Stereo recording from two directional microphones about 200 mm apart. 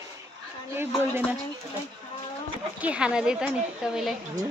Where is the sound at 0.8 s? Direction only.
10° right (ahead or behind).